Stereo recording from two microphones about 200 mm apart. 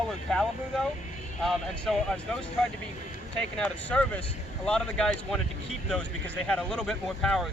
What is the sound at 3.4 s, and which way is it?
Speech, 5° left (ahead or behind).